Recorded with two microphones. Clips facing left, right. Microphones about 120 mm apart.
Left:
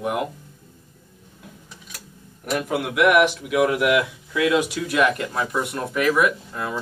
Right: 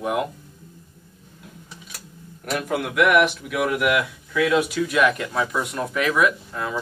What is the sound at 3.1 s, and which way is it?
Speech, 15° left (ahead or behind).